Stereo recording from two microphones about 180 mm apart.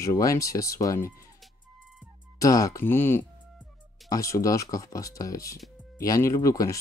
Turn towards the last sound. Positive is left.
turn(degrees=15)  # may be behind; listen again after turning